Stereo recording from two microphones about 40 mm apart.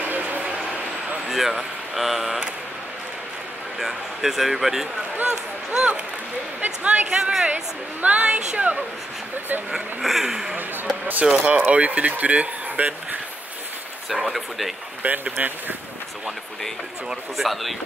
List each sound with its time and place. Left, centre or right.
0.0 s a sound: right
1.3 s speech: centre
3.8 s speech: centre
5.2 s speech: right
6.6 s speech: right
10.0 s speech: centre
11.2 s speech: right
14.2 s speech: centre
15.0 s speech: right
17.4 s speech: centre